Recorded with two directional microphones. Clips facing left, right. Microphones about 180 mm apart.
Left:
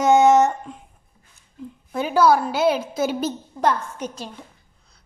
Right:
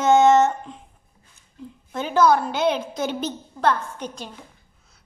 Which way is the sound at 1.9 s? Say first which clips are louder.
Left 1 dB; 10° left (ahead or behind).